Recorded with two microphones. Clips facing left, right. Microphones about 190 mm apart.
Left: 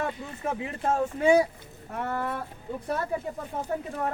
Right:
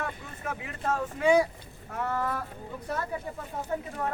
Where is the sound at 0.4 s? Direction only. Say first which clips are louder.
Left 4 dB; 30° left (ahead or behind).